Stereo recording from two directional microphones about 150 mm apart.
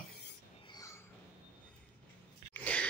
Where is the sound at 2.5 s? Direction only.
10° left (ahead or behind).